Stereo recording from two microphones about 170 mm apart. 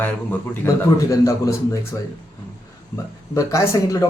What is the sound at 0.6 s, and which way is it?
Speech, 15° left (ahead or behind).